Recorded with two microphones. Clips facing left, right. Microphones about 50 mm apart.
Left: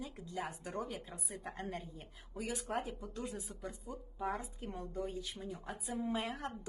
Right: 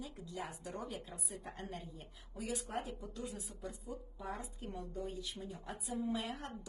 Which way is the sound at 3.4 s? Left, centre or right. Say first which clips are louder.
Left 2 dB; left.